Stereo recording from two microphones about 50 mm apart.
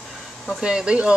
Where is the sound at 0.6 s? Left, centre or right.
Centre.